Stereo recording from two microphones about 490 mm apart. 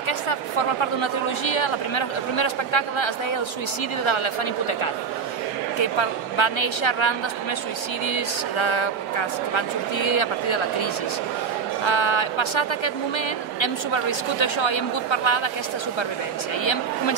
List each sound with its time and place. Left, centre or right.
0.3 s speech: left
5.8 s speech: left